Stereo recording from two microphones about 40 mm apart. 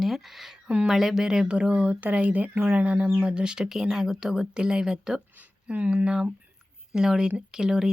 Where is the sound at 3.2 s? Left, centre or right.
Right.